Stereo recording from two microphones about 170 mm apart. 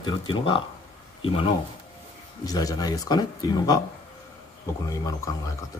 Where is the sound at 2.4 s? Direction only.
20° left (ahead or behind).